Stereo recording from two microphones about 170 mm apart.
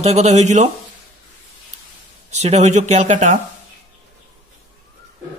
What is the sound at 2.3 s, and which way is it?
Speech, 40° right (ahead or behind).